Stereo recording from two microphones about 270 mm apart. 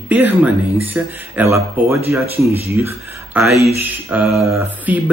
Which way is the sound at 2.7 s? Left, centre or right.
Centre.